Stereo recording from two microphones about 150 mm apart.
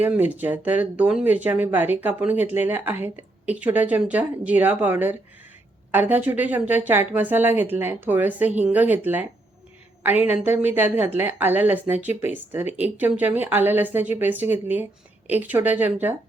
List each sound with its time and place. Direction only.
0.0 s speech: 10° right (ahead or behind)